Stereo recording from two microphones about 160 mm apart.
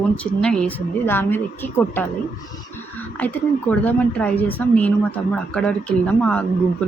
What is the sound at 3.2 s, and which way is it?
A woman's voice, 10° left (ahead or behind).